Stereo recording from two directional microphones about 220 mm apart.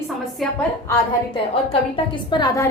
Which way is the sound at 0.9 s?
25° left (ahead or behind).